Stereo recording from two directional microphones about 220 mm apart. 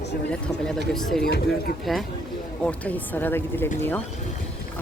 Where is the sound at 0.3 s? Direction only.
5° left (ahead or behind).